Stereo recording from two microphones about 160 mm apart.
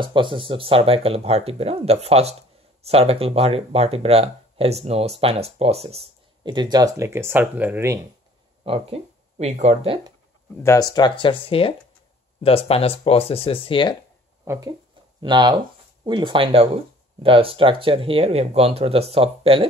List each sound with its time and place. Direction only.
0.0 s speech: 30° right (ahead or behind); by 8.0 s 15° right (ahead or behind)
8.6 s speech: 35° right (ahead or behind)
10.6 s speech: 20° left (ahead or behind)
14.4 s speech: 15° right (ahead or behind)
15.1 s speech: 30° right (ahead or behind)